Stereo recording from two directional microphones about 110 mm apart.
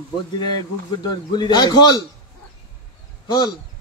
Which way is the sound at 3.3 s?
40° left (ahead or behind).